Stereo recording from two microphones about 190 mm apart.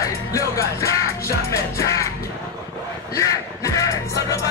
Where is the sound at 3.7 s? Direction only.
15° left (ahead or behind).